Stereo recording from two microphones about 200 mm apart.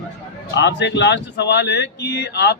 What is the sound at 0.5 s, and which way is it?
A man's voice, 60° left (ahead or behind).